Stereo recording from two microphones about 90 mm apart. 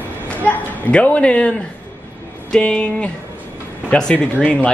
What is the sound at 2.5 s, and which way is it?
Speech, 10° left (ahead or behind).